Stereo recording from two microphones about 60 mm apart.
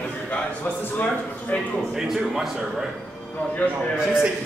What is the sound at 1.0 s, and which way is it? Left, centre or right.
Speech, left.